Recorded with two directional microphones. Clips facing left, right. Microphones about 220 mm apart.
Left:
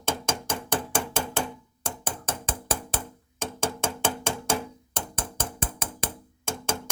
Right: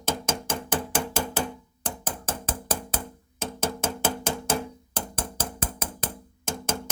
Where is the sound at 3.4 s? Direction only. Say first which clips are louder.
Even; 5° right (ahead or behind).